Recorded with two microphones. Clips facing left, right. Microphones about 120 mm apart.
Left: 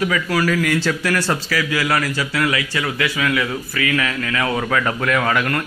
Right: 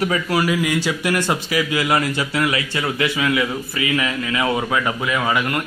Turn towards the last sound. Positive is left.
turn(degrees=-15)  # may be behind; listen again after turning